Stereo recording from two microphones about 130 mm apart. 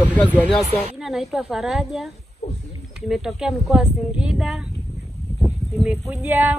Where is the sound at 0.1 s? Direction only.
10° left (ahead or behind).